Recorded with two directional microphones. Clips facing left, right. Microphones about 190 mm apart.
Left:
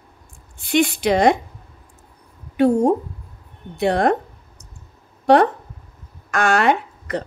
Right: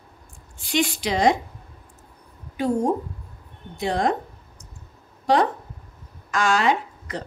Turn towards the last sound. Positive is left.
turn(degrees=60)  # may be behind; listen again after turning